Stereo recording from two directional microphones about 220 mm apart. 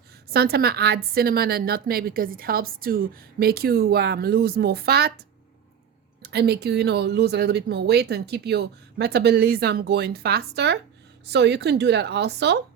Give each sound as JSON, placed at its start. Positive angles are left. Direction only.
{"t": 0.3, "sound": "a woman's voice", "side_deg": -45}
{"t": 6.2, "sound": "a woman's voice", "side_deg": -50}